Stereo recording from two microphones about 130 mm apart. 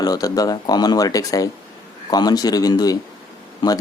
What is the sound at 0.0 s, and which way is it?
Speech, 30° left (ahead or behind).